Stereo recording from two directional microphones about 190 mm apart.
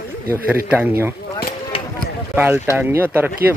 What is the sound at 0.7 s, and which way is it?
Speech, 10° right (ahead or behind).